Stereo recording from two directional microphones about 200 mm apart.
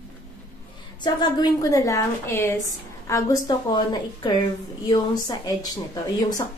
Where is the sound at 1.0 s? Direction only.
20° left (ahead or behind).